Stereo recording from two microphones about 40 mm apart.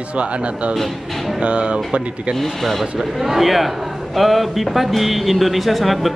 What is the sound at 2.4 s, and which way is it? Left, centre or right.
Speech, centre.